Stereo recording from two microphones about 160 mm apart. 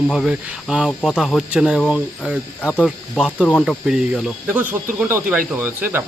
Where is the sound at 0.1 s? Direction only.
5° right (ahead or behind).